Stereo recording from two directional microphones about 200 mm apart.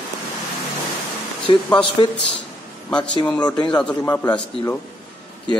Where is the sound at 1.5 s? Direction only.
25° left (ahead or behind).